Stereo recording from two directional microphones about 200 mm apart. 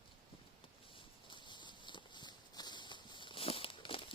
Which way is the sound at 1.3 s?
25° left (ahead or behind).